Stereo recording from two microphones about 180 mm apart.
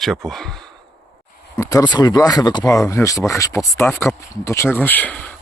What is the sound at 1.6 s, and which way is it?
Speech, 15° left (ahead or behind).